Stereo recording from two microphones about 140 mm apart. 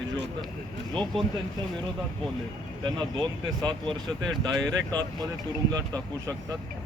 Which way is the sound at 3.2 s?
30° right (ahead or behind).